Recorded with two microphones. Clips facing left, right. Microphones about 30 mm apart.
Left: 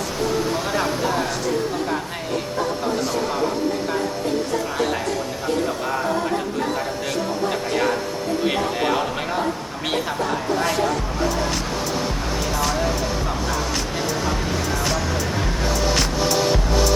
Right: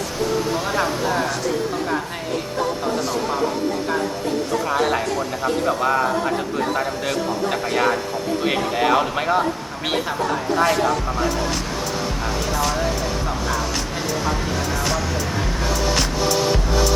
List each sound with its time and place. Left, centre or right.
0.6 s speech: centre
4.7 s a man's voice: centre
11.5 s music: centre